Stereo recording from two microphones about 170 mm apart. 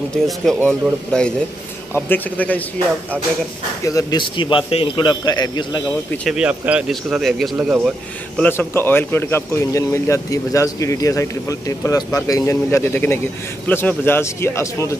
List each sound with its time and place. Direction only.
0.2 s speech: 5° left (ahead or behind)
3.8 s a man's voice: 20° left (ahead or behind)
6.2 s speech: 5° right (ahead or behind)
8.4 s speech: 15° left (ahead or behind)